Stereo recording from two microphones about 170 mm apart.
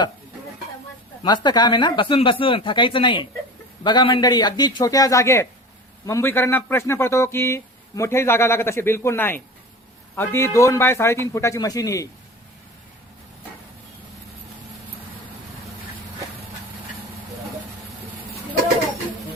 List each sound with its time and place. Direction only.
1.2 s speech: 25° left (ahead or behind)